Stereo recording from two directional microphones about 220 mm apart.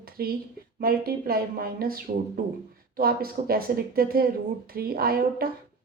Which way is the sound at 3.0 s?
40° right (ahead or behind).